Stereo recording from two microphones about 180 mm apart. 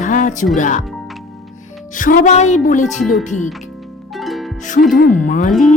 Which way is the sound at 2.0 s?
50° left (ahead or behind).